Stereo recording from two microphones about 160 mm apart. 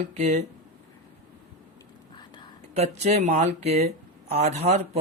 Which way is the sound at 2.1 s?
30° left (ahead or behind).